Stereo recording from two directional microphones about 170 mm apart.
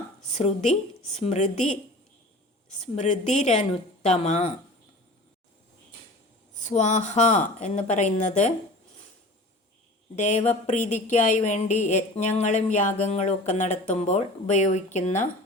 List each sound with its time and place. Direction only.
0.3 s speech: 40° left (ahead or behind)
2.8 s speech: 40° left (ahead or behind)
6.6 s a woman's voice: 45° left (ahead or behind)
10.2 s a woman's voice: 45° left (ahead or behind)